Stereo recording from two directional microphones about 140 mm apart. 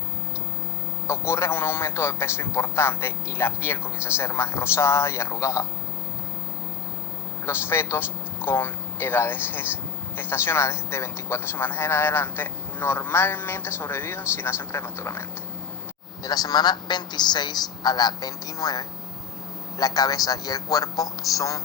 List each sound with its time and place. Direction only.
1.0 s a man's voice: 20° left (ahead or behind)
7.4 s a man's voice: 15° left (ahead or behind)